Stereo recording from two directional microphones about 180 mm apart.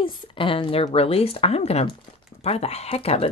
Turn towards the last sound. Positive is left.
turn(degrees=35)  # may be behind; listen again after turning